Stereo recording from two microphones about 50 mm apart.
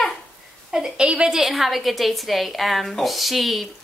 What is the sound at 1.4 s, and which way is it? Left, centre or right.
Speech, centre.